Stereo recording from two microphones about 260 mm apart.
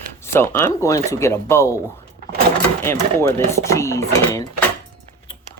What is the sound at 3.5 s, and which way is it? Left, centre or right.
Speech, centre.